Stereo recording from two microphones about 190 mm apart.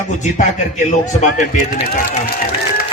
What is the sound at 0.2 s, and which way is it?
A man's voice, 40° left (ahead or behind).